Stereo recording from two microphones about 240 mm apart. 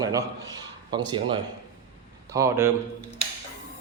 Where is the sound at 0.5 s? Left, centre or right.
Centre.